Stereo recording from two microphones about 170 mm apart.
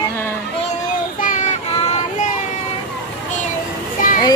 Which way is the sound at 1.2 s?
50° left (ahead or behind).